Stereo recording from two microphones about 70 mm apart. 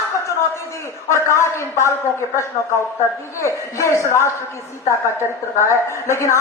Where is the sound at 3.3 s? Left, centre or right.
Left.